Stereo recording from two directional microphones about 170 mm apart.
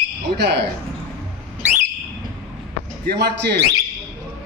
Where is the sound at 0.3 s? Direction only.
85° right.